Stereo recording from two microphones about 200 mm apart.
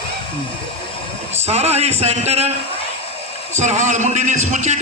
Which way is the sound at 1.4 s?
30° right (ahead or behind).